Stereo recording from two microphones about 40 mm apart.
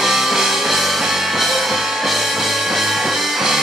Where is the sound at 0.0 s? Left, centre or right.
Centre.